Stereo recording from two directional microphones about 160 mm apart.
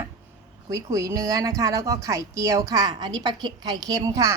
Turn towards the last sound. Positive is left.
turn(degrees=-25)  # may be behind; listen again after turning